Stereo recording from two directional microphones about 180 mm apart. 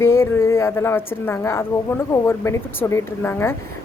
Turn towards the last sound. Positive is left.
turn(degrees=15)  # may be behind; listen again after turning